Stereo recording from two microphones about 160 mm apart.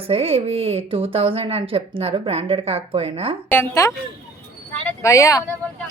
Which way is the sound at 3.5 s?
15° left (ahead or behind).